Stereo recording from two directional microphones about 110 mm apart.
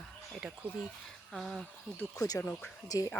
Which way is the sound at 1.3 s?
Centre (ahead or behind).